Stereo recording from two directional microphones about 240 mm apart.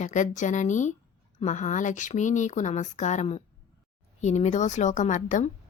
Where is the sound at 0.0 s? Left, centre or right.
Left.